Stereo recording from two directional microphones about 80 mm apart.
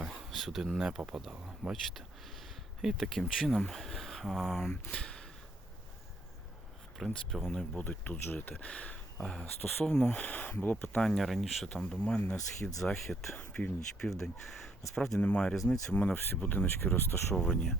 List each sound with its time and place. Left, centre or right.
0.0 s a sound: centre
0.3 s speech: centre
1.7 s speech: centre
4.9 s a sound: centre
7.3 s speech: centre
7.9 s speech: left
11.0 s speech: centre
13.3 s speech: centre
14.0 s speech: centre
15.2 s speech: centre
15.5 s speech: centre
15.9 s speech: centre
17.3 s speech: centre